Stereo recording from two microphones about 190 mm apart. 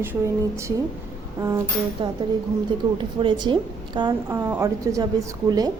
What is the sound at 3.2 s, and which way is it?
A woman's voice, 25° right (ahead or behind).